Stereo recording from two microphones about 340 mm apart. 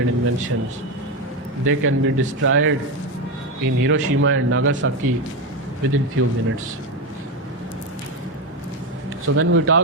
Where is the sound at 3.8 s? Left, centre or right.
Right.